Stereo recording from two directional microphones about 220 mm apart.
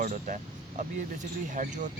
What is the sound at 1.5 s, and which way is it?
Speech, 35° right (ahead or behind).